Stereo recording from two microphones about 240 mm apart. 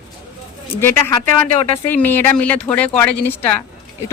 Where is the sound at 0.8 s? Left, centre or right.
Centre.